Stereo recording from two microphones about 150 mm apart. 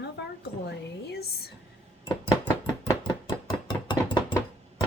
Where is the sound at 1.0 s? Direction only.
90° left.